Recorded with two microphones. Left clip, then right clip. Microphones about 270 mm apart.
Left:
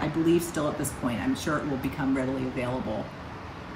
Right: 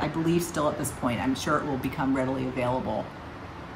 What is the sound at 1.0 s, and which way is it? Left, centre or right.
Speech, right.